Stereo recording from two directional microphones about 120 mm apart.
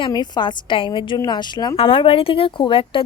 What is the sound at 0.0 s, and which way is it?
A woman's voice, 35° left (ahead or behind).